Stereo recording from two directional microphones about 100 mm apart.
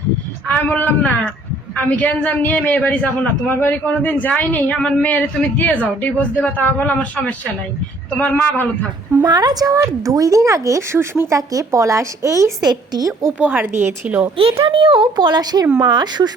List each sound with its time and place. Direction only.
0.4 s a man's voice: 15° left (ahead or behind)
9.2 s speech: 45° right (ahead or behind)
13.4 s a woman's voice: 20° right (ahead or behind)
14.3 s a child's voice: 65° right (ahead or behind); by 16.3 s 45° right (ahead or behind)